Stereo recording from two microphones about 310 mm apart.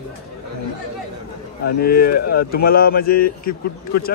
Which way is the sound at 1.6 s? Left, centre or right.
Left.